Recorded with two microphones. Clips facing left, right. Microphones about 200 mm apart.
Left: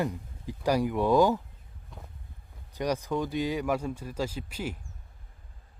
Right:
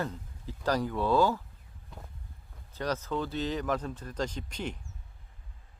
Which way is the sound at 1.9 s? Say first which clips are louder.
Even; centre (ahead or behind).